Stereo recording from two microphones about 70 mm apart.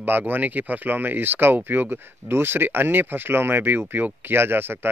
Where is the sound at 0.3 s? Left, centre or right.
Right.